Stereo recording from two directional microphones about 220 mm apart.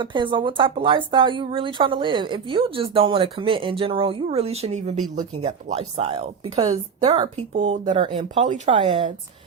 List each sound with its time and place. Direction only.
0.0 s speech: 20° right (ahead or behind)